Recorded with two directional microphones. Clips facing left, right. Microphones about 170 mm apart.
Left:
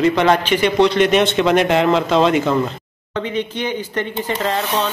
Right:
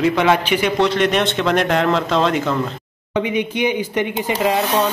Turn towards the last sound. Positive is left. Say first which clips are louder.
# right 2 dB
turn(degrees=-10)  # may be behind; listen again after turning